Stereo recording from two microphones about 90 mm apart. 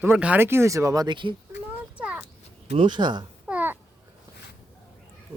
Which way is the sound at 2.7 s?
60° right (ahead or behind).